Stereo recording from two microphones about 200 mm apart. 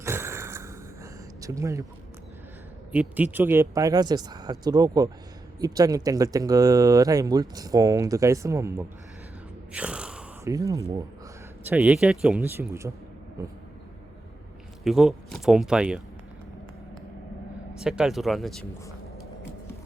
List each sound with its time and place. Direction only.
0.0 s a sound: 15° right (ahead or behind)
1.4 s speech: 15° right (ahead or behind)
2.9 s speech: 10° right (ahead or behind)
9.7 s a sound: 5° right (ahead or behind)
10.5 s speech: 15° right (ahead or behind)
14.8 s speech: centre (ahead or behind)
17.7 s speech: 5° right (ahead or behind)